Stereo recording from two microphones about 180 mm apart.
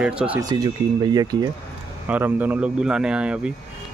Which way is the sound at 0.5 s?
25° right (ahead or behind).